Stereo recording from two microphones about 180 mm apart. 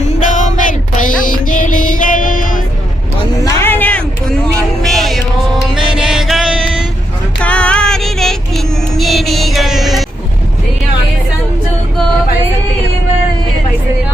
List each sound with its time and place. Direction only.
0.0 s music: 45° left (ahead or behind)
3.3 s a sound: 20° left (ahead or behind); by 5.2 s centre (ahead or behind)
5.7 s music: 5° right (ahead or behind)
7.4 s child singing: 5° left (ahead or behind)